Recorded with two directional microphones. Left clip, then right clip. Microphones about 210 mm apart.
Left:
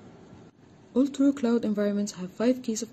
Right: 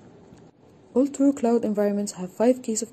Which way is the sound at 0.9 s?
Centre (ahead or behind).